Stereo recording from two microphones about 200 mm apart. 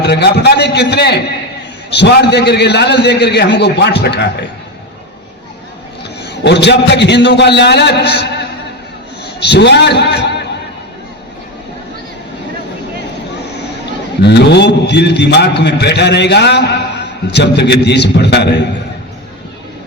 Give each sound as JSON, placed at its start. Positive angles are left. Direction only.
{"t": 0.0, "sound": "a man's voice", "side_deg": 55}
{"t": 6.2, "sound": "a man's voice", "side_deg": 60}
{"t": 14.2, "sound": "a man's voice", "side_deg": 60}